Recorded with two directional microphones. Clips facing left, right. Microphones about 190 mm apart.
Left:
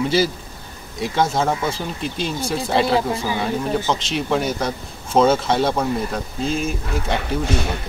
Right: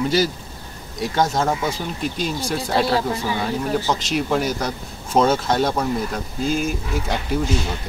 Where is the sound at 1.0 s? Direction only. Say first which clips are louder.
Left 1 dB; centre (ahead or behind).